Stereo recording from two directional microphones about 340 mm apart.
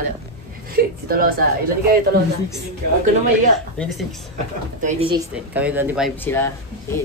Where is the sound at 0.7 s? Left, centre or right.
Right.